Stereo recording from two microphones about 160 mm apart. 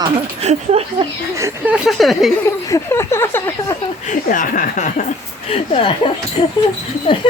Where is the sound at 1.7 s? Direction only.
Centre (ahead or behind).